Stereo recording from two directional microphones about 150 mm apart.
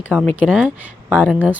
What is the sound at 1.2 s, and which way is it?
Speech, 10° right (ahead or behind).